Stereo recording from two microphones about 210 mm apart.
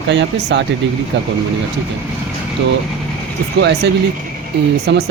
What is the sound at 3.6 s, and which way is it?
Speech, 55° right (ahead or behind).